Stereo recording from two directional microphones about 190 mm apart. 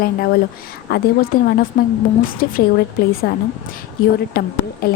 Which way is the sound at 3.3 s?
60° left (ahead or behind).